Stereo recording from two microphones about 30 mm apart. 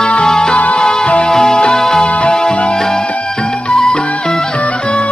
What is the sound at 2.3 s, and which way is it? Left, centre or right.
Music, left.